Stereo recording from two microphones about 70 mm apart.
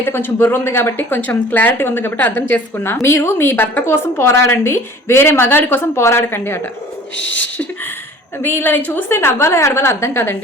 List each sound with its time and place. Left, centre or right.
0.0 s speech: left
8.4 s speech: left